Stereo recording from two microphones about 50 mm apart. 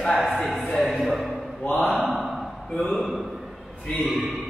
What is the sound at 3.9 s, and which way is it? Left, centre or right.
Speech, centre.